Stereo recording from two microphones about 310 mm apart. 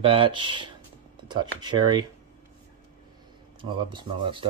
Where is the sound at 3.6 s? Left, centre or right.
Centre.